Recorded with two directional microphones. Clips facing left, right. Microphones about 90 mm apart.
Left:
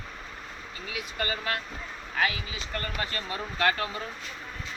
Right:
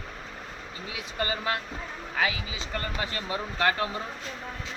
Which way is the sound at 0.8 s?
25° right (ahead or behind).